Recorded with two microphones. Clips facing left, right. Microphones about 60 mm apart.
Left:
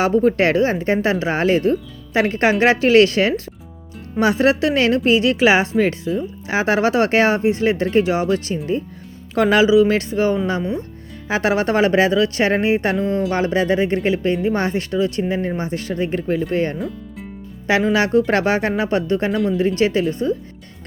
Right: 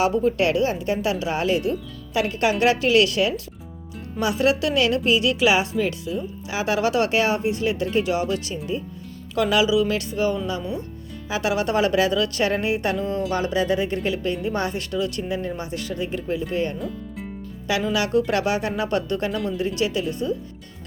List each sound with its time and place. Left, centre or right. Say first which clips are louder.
0.0 s speech: left 4 dB; left
16.7 s speech: left 3 dB; centre
17.7 s speech: left 6 dB; left